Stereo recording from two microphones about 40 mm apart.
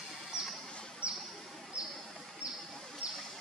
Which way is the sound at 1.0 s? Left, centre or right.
Right.